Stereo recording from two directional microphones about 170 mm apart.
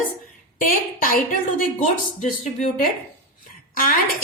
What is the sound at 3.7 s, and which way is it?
Speech, 55° left (ahead or behind).